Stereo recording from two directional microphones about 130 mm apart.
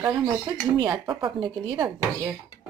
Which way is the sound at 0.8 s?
35° right (ahead or behind).